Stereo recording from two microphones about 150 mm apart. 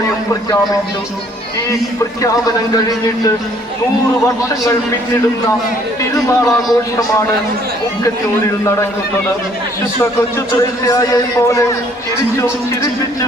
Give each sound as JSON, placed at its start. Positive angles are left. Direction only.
{"t": 6.1, "sound": "a man's voice", "side_deg": 20}
{"t": 10.8, "sound": "a man's voice", "side_deg": 25}